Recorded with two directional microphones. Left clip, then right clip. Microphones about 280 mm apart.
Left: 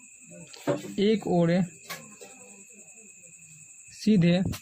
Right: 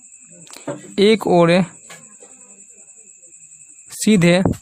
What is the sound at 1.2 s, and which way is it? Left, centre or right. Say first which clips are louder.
Speech: right 12 dB; right.